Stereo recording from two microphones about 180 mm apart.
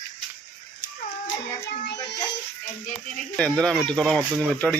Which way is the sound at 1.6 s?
70° left (ahead or behind).